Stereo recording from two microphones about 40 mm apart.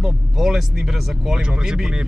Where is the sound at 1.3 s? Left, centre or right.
Centre.